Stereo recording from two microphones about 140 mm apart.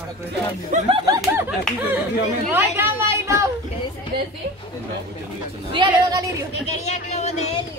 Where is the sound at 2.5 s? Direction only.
15° right (ahead or behind).